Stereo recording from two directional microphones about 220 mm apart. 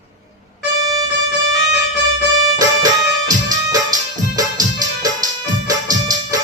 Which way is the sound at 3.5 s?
15° right (ahead or behind).